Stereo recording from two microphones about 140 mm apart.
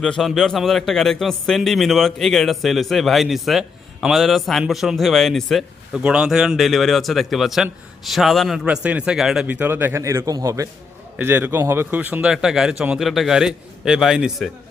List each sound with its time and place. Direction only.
0.0 s a man's voice: 5° left (ahead or behind)
9.5 s a man's voice: 15° right (ahead or behind)